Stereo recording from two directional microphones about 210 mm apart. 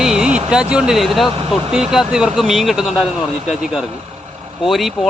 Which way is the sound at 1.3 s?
25° right (ahead or behind).